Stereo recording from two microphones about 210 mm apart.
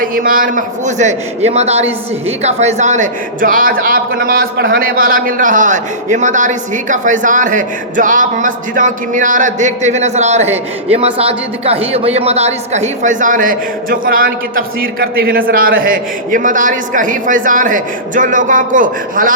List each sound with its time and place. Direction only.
0.0 s a man's voice: 40° right (ahead or behind)